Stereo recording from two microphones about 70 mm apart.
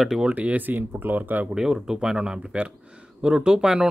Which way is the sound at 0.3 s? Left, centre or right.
Right.